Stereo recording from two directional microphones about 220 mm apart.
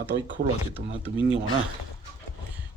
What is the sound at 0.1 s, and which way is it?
Speech, 45° right (ahead or behind).